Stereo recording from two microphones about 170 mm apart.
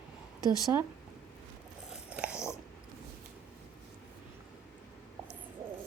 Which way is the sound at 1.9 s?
5° right (ahead or behind).